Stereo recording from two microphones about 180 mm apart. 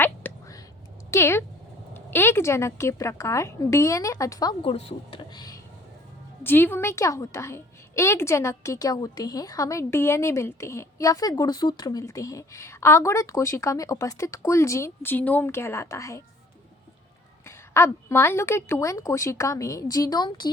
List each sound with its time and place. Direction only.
0.0 s a sound: 10° left (ahead or behind)
1.9 s a woman's voice: 10° left (ahead or behind)
6.4 s a woman's voice: 10° left (ahead or behind)
17.4 s a woman's voice: 15° left (ahead or behind)